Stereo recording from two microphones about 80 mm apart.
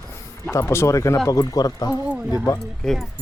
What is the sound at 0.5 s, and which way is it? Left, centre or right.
Speech, left.